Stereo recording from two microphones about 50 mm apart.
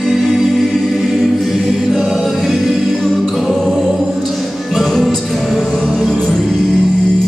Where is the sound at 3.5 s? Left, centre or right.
Centre.